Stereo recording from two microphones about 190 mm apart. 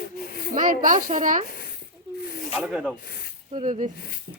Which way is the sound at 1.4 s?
55° left (ahead or behind).